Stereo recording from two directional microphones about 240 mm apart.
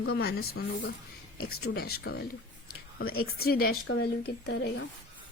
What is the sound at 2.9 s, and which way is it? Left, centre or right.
Speech, left.